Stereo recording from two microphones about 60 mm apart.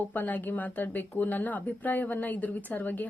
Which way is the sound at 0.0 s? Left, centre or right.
Left.